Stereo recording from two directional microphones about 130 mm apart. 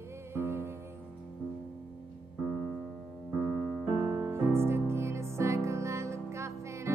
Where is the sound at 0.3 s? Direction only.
20° right (ahead or behind).